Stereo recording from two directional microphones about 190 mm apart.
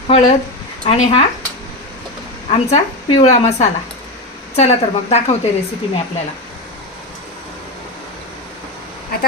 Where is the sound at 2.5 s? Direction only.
30° left (ahead or behind).